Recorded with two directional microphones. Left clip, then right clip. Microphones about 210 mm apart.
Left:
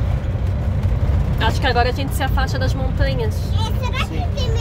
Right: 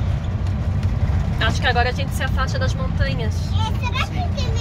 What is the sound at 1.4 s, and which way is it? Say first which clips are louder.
Speech: left 1 dB; 10° left (ahead or behind).